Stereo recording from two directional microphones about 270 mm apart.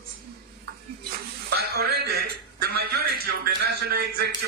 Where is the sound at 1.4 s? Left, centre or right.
Right.